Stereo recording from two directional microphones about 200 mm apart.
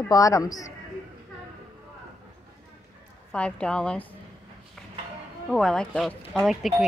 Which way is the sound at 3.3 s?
5° left (ahead or behind).